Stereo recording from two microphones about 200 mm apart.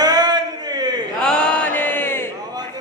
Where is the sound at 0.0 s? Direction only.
20° right (ahead or behind).